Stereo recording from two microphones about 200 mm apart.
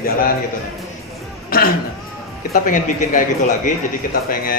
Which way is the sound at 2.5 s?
40° left (ahead or behind).